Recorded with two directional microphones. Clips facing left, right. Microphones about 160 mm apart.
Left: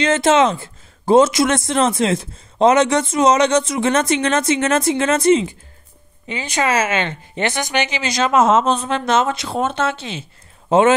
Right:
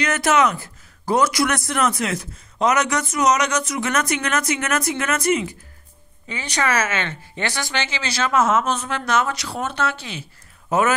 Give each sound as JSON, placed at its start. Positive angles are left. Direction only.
{"t": 0.0, "sound": "speech", "side_deg": 25}